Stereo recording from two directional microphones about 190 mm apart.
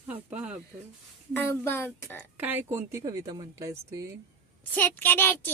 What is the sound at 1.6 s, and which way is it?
Speech, 15° left (ahead or behind).